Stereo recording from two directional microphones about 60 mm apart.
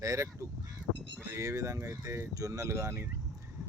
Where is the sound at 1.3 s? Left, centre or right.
Right.